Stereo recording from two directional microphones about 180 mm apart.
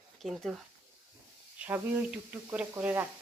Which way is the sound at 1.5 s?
10° right (ahead or behind).